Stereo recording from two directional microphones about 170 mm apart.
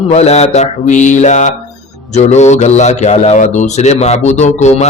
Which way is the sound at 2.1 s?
40° left (ahead or behind).